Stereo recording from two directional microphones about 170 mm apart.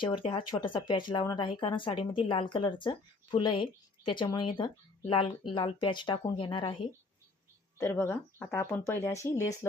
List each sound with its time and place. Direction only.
0.0 s speech: 30° left (ahead or behind)
7.8 s speech: 15° left (ahead or behind)